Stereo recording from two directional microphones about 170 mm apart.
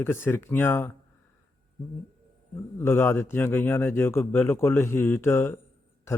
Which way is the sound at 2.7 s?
15° left (ahead or behind).